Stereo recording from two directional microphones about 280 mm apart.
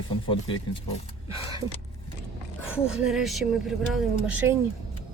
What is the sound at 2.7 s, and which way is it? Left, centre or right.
Speech, centre.